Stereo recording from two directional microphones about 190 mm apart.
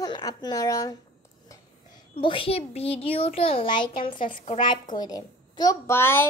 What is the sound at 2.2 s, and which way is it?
A woman's voice, 25° left (ahead or behind).